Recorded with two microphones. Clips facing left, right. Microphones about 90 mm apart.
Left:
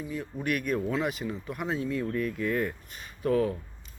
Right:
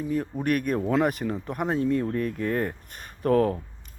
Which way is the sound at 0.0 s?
50° right (ahead or behind).